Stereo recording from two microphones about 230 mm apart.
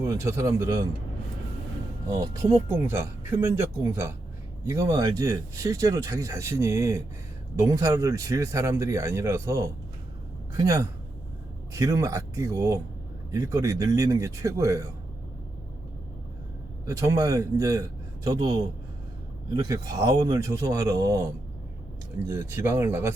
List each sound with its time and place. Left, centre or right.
0.0 s speech: centre
2.0 s speech: centre
16.8 s speech: centre
22.3 s speech: centre